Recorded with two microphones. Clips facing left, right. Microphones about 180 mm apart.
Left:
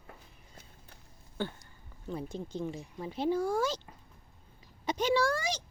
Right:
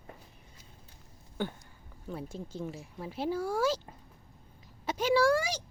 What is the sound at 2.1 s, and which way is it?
Speech, 5° right (ahead or behind).